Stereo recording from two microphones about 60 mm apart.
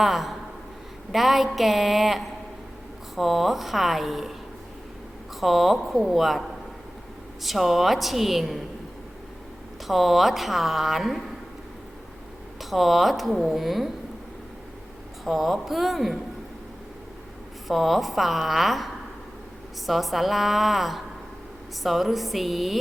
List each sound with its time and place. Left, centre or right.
0.0 s speech: centre
5.4 s speech: centre
7.4 s speech: centre
9.8 s speech: centre
12.5 s speech: centre
15.2 s speech: centre
17.7 s speech: centre
19.9 s speech: centre